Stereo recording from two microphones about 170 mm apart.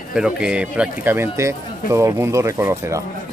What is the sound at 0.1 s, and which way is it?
Speech, 5° right (ahead or behind).